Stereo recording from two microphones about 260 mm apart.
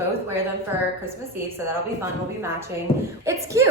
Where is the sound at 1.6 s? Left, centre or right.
Centre.